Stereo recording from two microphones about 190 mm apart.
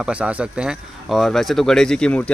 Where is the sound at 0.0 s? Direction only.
5° right (ahead or behind).